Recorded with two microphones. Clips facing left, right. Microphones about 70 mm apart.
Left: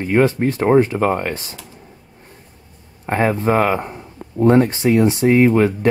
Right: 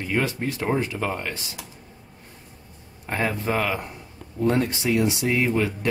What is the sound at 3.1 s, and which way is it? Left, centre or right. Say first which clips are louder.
Speech: left 8 dB; left.